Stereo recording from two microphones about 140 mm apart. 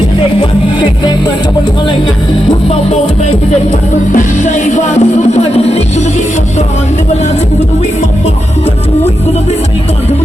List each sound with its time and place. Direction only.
4.1 s music: 65° left (ahead or behind); by 5.8 s 50° left (ahead or behind)